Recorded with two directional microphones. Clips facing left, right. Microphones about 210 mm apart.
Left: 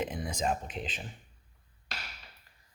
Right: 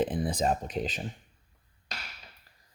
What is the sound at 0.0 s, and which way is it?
Speech, 35° right (ahead or behind).